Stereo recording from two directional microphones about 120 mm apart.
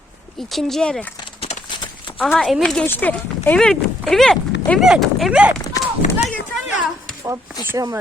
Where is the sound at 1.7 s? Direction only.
40° left (ahead or behind).